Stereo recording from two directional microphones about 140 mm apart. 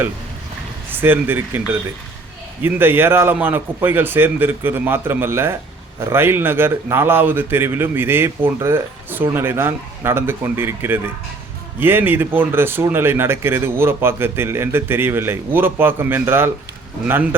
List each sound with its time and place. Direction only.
0.9 s speech: 15° right (ahead or behind)